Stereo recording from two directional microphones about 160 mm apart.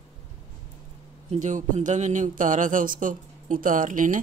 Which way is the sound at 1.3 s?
50° right (ahead or behind).